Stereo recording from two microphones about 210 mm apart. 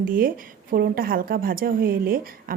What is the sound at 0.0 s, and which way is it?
Speech, 40° right (ahead or behind).